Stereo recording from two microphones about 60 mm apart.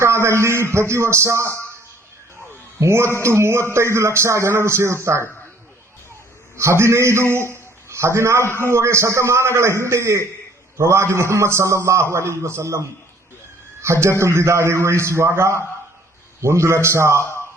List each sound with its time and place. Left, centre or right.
0.0 s speech: right
2.8 s speech: right
6.6 s a man's voice: right
13.8 s speech: right
17.2 s speech: left